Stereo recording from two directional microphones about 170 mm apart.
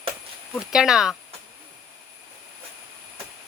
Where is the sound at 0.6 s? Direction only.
5° right (ahead or behind).